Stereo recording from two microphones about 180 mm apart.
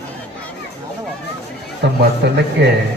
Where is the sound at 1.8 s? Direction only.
70° right (ahead or behind).